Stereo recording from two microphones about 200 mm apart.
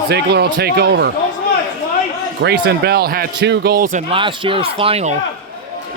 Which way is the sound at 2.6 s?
55° right (ahead or behind).